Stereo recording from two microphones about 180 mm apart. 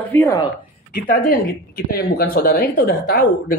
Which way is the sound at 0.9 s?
50° left (ahead or behind).